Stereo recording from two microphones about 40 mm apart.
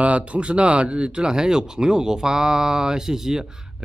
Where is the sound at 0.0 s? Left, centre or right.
Right.